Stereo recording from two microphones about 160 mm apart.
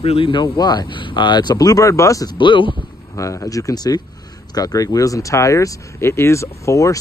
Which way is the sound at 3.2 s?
20° left (ahead or behind).